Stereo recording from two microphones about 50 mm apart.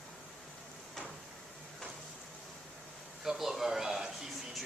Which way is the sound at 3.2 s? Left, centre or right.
Centre.